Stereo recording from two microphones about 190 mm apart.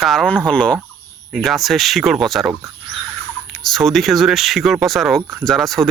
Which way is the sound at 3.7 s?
Centre (ahead or behind).